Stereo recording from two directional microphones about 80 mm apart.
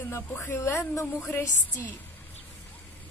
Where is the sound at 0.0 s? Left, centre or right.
Left.